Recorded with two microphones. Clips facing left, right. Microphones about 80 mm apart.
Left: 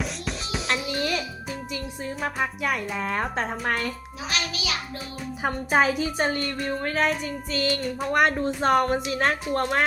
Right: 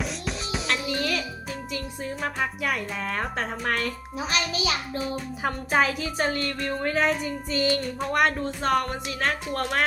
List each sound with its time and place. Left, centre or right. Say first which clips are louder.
0.0 s music: even; centre
0.9 s music: even; centre
1.7 s speech: right 1 dB; centre
4.3 s a child's voice: right 2 dB; right
5.4 s speech: left 2 dB; centre
7.3 s music: right 1 dB; centre
7.8 s speech: left 1 dB; centre
8.6 s speech: left 3 dB; left
9.5 s speech: left 3 dB; centre